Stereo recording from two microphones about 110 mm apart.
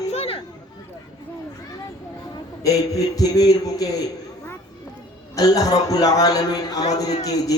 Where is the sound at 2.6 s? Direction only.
35° left (ahead or behind).